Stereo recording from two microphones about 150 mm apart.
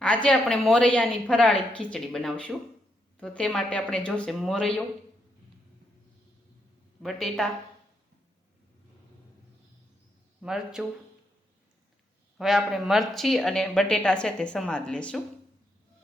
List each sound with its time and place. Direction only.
0.0 s a woman's voice: 5° left (ahead or behind)
7.0 s speech: centre (ahead or behind)
10.4 s speech: 5° right (ahead or behind)
12.4 s speech: centre (ahead or behind)